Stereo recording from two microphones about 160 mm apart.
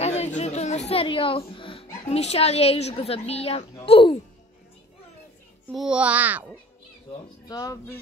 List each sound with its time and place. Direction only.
0.0 s a sound: 45° left (ahead or behind)
3.8 s speech: 35° left (ahead or behind)
5.8 s a child's voice: 5° right (ahead or behind)
7.4 s speech: 25° left (ahead or behind)